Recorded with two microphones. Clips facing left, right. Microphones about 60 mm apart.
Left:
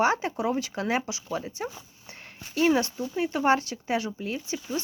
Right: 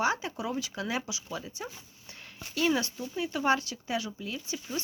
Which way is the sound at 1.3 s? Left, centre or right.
Left.